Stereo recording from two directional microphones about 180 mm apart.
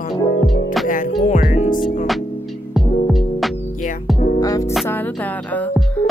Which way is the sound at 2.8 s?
Centre (ahead or behind).